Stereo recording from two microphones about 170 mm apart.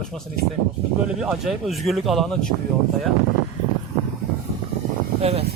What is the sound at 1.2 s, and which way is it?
A man's voice, 5° right (ahead or behind).